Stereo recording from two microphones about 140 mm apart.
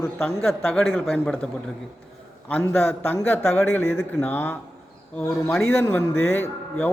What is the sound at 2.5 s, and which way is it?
A man's voice, 15° left (ahead or behind).